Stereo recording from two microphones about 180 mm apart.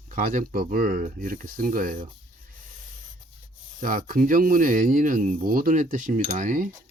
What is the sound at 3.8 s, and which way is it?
Speech, 50° right (ahead or behind).